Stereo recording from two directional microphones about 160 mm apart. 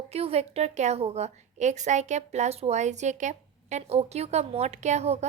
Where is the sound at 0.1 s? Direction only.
40° right (ahead or behind).